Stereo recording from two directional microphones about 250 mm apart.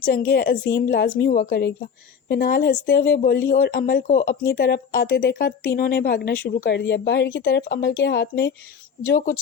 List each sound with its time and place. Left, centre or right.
0.0 s speech: left